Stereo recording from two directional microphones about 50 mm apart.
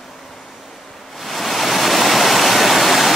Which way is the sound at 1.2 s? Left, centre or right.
Centre.